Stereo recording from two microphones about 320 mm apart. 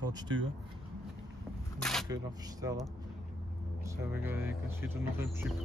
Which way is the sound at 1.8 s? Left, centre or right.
Centre.